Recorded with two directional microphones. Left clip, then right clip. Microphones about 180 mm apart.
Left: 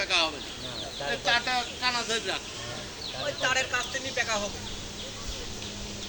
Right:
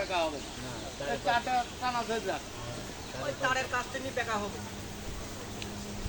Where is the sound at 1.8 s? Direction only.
35° right (ahead or behind).